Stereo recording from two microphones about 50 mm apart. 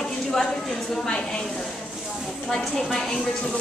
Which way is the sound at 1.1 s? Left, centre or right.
Centre.